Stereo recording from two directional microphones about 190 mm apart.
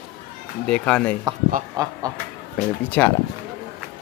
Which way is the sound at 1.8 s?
20° right (ahead or behind).